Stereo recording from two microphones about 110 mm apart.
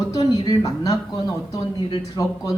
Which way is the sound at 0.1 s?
35° left (ahead or behind).